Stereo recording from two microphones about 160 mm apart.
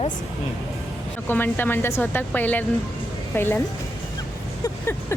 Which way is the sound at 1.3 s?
10° left (ahead or behind).